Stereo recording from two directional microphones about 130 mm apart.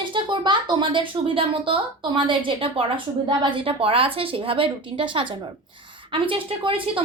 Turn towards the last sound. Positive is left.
turn(degrees=-45)  # may be behind; listen again after turning